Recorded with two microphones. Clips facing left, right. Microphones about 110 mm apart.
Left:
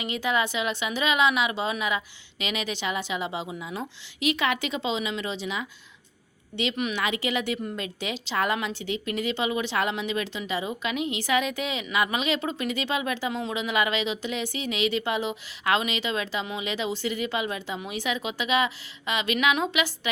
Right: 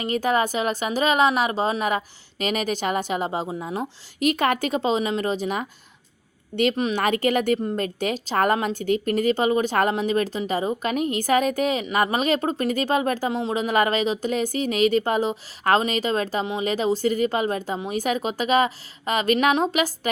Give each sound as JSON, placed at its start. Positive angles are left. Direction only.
{"t": 0.0, "sound": "a woman's voice", "side_deg": -45}
{"t": 6.9, "sound": "a woman's voice", "side_deg": -45}